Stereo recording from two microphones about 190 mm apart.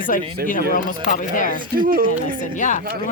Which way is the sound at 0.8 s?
45° left (ahead or behind).